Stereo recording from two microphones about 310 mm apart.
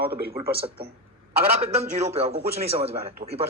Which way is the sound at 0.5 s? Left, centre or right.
Centre.